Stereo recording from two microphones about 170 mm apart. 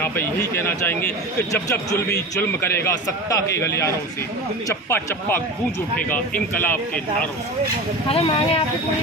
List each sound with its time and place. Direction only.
0.0 s a man's voice: 15° left (ahead or behind)
6.6 s a man's voice: 10° left (ahead or behind)
8.1 s speech: 30° left (ahead or behind)